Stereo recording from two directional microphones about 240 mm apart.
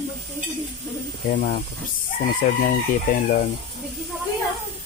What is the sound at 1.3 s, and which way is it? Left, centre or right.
Chicken, left.